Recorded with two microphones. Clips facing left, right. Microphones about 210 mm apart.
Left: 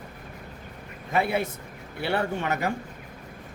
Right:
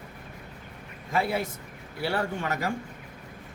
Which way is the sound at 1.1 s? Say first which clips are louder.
Left 2 dB; 20° left (ahead or behind).